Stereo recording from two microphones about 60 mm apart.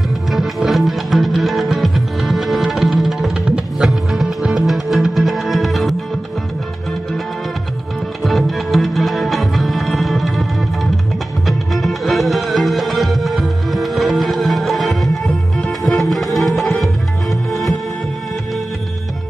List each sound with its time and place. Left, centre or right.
0.3 s music: centre
3.4 s music: centre
3.8 s music: centre
8.2 s music: centre